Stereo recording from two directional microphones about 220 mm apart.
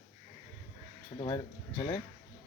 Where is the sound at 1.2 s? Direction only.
20° left (ahead or behind).